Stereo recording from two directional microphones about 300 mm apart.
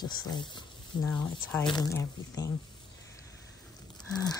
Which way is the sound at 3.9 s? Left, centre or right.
Centre.